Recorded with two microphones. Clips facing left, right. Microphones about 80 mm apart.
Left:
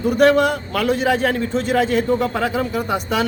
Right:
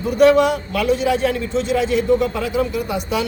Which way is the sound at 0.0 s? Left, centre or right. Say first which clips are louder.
Right 1 dB; left.